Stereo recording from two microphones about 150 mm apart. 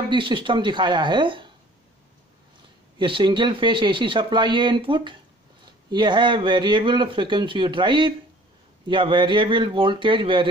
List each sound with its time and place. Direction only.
0.1 s speech: 35° right (ahead or behind)
3.0 s speech: 35° right (ahead or behind)